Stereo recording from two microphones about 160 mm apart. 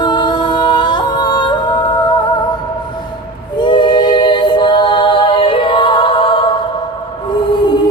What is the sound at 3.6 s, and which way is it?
Music, 30° left (ahead or behind).